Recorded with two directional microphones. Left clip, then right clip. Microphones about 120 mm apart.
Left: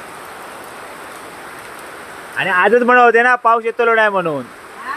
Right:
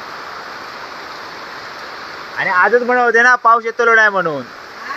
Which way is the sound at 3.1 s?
25° left (ahead or behind).